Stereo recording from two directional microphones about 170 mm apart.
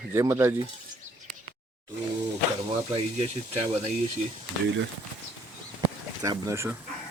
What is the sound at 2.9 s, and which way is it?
Speech, 35° right (ahead or behind).